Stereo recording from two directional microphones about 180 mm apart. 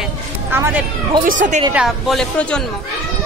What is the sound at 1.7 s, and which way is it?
Speech, centre (ahead or behind).